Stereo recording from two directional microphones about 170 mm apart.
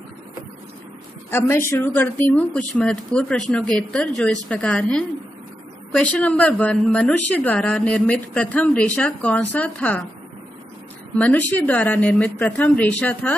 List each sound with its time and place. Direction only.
1.3 s a woman's voice: 15° left (ahead or behind)
11.1 s a woman's voice: 10° left (ahead or behind)